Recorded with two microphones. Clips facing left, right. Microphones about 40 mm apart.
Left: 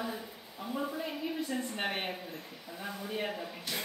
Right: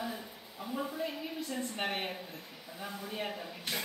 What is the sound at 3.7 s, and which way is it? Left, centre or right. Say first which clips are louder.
Music: right 1 dB; right.